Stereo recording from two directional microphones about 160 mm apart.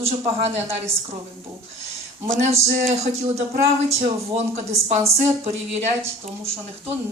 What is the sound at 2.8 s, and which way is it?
A woman's voice, 40° right (ahead or behind).